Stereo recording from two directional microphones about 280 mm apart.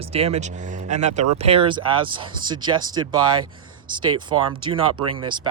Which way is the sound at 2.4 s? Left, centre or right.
Centre.